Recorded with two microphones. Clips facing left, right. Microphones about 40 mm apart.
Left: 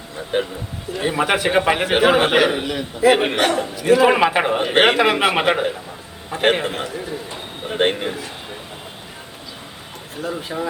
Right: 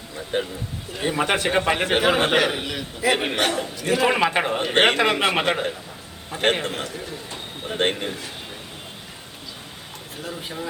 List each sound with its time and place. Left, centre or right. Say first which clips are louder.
0.3 s speech: left 4 dB; left
0.9 s a man's voice: left 3 dB; centre
2.6 s a man's voice: left 7 dB; left
10.2 s speech: left 7 dB; left